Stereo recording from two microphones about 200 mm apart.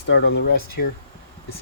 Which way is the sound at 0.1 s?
60° left (ahead or behind).